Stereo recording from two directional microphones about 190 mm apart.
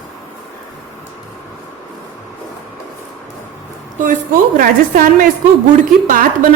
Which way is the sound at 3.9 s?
45° right (ahead or behind).